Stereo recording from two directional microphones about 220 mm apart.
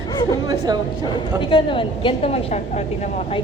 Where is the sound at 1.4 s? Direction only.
20° left (ahead or behind).